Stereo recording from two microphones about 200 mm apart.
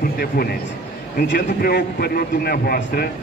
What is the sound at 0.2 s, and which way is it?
A man's voice, 50° left (ahead or behind).